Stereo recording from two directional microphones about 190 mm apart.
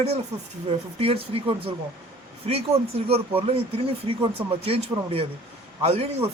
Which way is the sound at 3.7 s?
30° right (ahead or behind).